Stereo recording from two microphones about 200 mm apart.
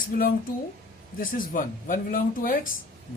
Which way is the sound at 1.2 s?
45° left (ahead or behind).